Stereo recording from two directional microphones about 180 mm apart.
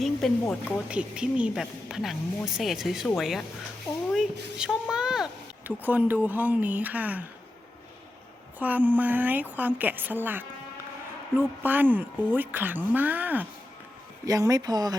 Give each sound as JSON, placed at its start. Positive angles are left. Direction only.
{"t": 0.2, "sound": "speech", "side_deg": 0}
{"t": 8.5, "sound": "speech", "side_deg": -10}